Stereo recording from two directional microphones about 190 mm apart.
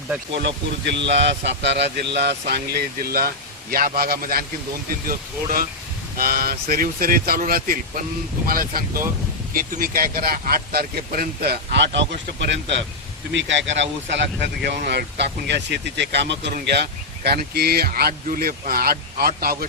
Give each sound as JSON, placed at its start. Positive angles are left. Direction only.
{"t": 0.4, "sound": "speech", "side_deg": -70}